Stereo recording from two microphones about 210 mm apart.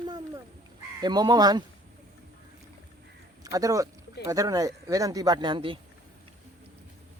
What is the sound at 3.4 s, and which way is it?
Speech, 15° right (ahead or behind).